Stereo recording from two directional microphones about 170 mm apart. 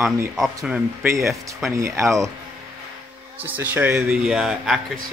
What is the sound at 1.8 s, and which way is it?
Speech, 15° right (ahead or behind).